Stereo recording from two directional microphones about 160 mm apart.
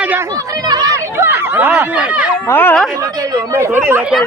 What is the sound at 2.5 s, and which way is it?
Speech, 15° left (ahead or behind).